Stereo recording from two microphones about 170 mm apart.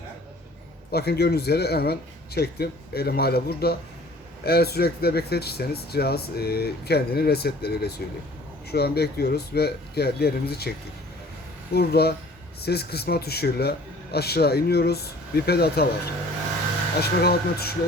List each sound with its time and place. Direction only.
0.9 s speech: 70° left (ahead or behind)
11.7 s speech: 65° left (ahead or behind)
17.0 s speech: 70° left (ahead or behind)